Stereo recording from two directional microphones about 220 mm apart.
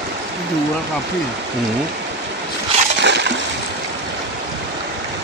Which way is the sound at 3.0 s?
50° right (ahead or behind).